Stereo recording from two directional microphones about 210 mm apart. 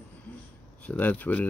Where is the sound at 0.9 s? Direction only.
10° left (ahead or behind).